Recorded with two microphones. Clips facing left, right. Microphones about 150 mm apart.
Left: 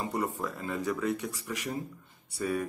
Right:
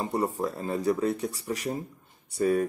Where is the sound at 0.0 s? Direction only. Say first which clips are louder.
Right 4 dB; 35° right (ahead or behind).